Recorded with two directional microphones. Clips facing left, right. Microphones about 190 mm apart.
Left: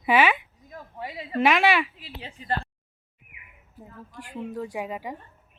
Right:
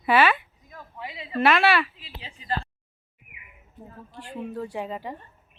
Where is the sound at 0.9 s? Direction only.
45° left (ahead or behind).